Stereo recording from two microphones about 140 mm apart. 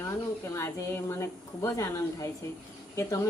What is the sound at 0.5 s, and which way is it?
A woman's voice, 20° left (ahead or behind).